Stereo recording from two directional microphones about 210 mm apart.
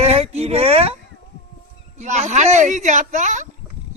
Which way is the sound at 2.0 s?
35° right (ahead or behind).